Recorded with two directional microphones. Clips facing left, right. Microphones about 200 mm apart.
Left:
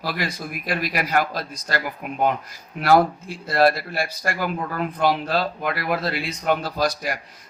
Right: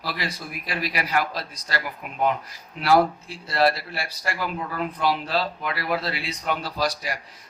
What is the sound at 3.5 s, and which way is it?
A man's voice, 50° left (ahead or behind).